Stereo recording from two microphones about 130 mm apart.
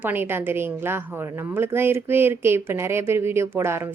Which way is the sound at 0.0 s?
15° right (ahead or behind).